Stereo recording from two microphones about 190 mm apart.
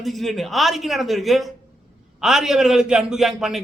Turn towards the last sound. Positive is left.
turn(degrees=-5)  # may be behind; listen again after turning